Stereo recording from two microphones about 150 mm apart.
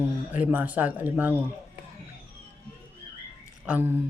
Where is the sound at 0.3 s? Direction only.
10° right (ahead or behind).